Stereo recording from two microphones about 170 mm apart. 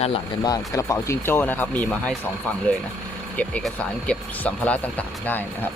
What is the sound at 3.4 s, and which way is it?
Speech, 5° left (ahead or behind).